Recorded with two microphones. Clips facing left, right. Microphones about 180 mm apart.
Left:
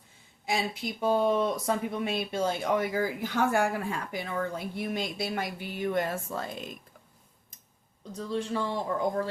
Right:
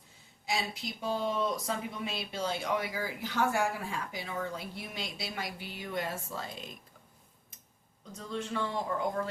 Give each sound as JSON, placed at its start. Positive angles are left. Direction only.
{"t": 0.4, "sound": "speech", "side_deg": 55}
{"t": 8.1, "sound": "speech", "side_deg": 35}